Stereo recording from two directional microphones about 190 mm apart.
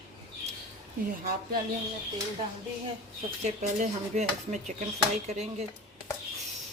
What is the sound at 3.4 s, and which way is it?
Speech, 40° right (ahead or behind).